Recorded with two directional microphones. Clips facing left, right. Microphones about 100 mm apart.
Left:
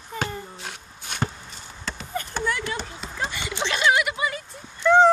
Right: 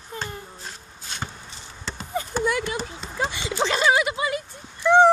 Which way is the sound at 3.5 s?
35° right (ahead or behind).